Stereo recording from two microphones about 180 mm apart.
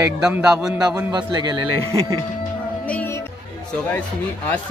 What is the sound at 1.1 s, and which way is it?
Speech, 25° right (ahead or behind).